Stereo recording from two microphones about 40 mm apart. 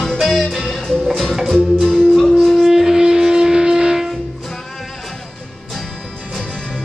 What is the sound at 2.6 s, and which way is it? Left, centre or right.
Wind instrument, centre.